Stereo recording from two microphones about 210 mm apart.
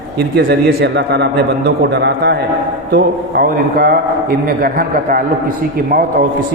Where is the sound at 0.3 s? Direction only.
50° right (ahead or behind).